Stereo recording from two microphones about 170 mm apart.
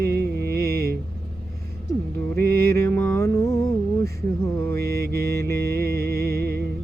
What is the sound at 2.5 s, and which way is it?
Music, 15° left (ahead or behind).